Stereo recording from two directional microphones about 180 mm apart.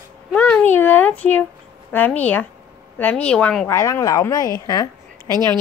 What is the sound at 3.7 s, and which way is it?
A woman's voice, 15° left (ahead or behind).